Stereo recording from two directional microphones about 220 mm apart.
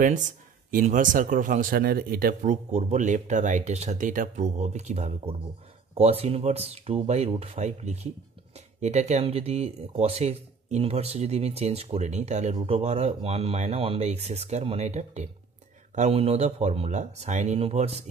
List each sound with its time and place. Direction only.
0.0 s speech: 35° right (ahead or behind)